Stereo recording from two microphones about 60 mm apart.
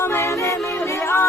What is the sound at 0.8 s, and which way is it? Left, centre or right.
Music, left.